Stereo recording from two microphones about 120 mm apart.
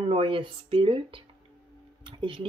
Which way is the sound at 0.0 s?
45° right (ahead or behind).